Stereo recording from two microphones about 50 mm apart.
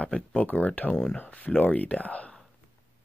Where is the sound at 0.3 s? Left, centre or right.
Left.